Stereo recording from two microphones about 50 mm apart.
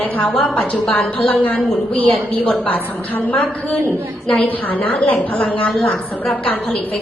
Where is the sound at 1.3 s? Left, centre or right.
Left.